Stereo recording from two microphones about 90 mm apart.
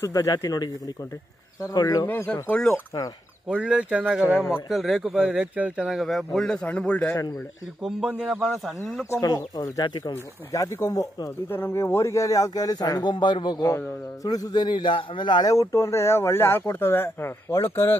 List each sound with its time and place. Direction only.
0.0 s speech: 40° left (ahead or behind)
2.0 s speech: 20° left (ahead or behind)
3.4 s a man's voice: 10° right (ahead or behind); by 7.2 s 15° left (ahead or behind)
8.3 s speech: 5° right (ahead or behind)
9.2 s speech: 45° left (ahead or behind)
10.5 s speech: 40° left (ahead or behind)
11.4 s speech: 25° left (ahead or behind); by 13.7 s 55° left (ahead or behind)
14.2 s a man's voice: 45° left (ahead or behind)
15.5 s speech: 35° left (ahead or behind)